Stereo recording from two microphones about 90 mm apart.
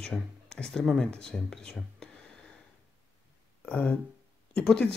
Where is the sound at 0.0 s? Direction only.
10° left (ahead or behind).